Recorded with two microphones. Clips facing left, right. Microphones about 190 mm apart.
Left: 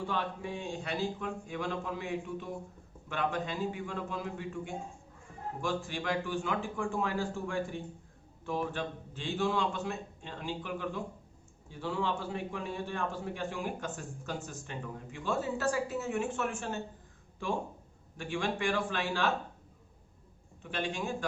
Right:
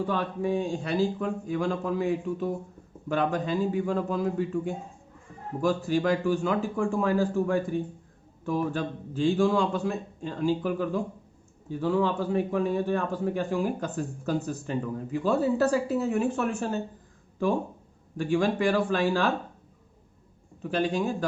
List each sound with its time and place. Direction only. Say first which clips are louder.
0.1 s a man's voice: right 8 dB; 40° right (ahead or behind)
18.2 s speech: right 9 dB; 40° right (ahead or behind)
20.6 s speech: right 9 dB; 40° right (ahead or behind)